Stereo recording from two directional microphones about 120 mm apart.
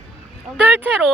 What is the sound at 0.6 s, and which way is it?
Speech, 15° right (ahead or behind).